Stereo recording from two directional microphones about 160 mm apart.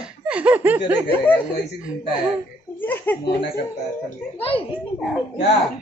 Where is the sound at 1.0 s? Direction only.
10° left (ahead or behind).